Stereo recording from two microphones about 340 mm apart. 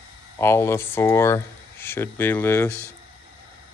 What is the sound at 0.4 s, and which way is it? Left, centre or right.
Speech, centre.